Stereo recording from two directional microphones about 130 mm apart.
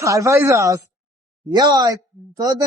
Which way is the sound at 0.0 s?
25° right (ahead or behind).